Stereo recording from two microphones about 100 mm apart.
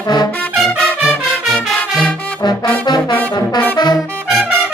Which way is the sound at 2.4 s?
45° left (ahead or behind).